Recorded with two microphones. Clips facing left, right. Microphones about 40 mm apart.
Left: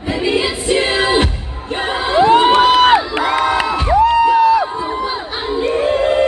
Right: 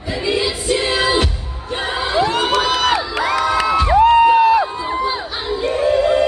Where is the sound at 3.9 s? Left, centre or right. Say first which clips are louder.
Right 1 dB; right.